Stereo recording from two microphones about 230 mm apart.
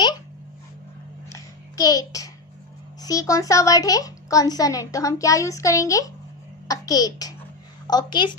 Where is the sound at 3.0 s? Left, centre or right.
Centre.